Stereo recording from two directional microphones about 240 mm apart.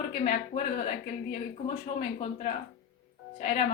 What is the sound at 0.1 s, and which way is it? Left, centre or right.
Speech, left.